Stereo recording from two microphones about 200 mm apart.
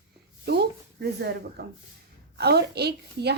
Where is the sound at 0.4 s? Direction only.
55° right (ahead or behind).